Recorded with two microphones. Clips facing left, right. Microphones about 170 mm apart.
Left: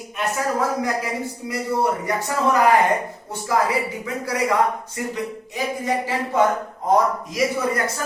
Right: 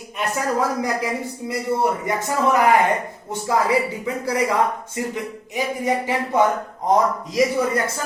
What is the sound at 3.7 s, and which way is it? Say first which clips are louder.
Speech: right 3 dB; 30° right (ahead or behind).